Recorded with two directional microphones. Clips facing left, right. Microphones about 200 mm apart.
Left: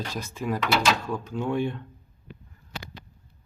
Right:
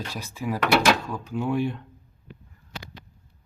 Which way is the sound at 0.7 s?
70° right (ahead or behind).